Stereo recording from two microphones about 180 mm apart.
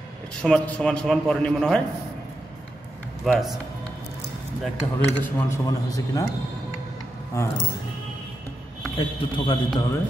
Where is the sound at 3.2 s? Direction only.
Centre (ahead or behind).